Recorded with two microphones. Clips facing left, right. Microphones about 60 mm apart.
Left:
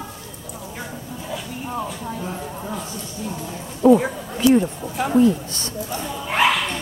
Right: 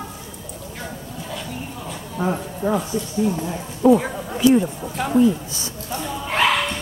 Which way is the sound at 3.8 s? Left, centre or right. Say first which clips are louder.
Left 1 dB; centre.